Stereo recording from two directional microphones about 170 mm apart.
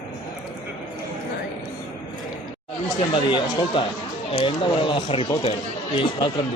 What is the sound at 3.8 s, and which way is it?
Speech, 30° left (ahead or behind).